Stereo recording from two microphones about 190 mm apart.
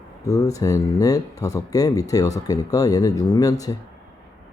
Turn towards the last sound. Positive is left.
turn(degrees=20)  # may be behind; listen again after turning